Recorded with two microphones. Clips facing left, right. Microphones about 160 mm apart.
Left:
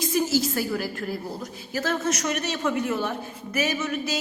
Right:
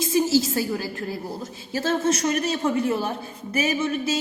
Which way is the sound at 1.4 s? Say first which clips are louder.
Right 2 dB; 25° right (ahead or behind).